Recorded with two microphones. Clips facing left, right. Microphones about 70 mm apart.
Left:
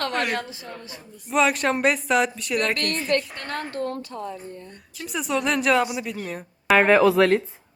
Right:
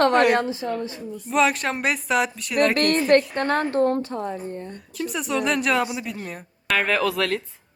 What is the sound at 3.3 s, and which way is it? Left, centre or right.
Speech, right.